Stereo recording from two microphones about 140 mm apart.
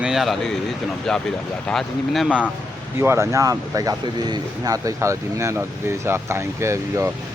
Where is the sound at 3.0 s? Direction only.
20° right (ahead or behind).